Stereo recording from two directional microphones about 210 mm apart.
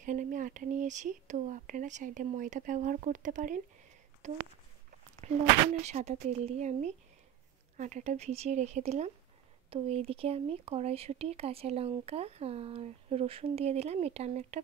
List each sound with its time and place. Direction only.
0.0 s speech: 40° right (ahead or behind)
5.2 s a sound: 30° right (ahead or behind)
5.8 s speech: 30° right (ahead or behind)